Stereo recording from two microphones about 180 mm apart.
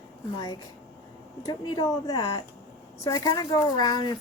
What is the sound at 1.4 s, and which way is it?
Speech, 25° left (ahead or behind).